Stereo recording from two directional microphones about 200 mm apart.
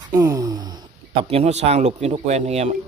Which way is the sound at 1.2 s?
30° right (ahead or behind).